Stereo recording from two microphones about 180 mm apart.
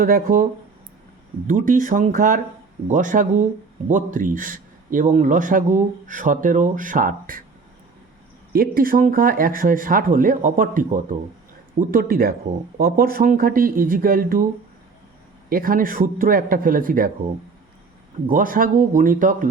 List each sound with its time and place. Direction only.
0.0 s speech: 50° right (ahead or behind)
1.5 s speech: 50° right (ahead or behind)
8.5 s speech: 55° right (ahead or behind)
15.4 s speech: 50° right (ahead or behind)
18.3 s speech: 50° right (ahead or behind)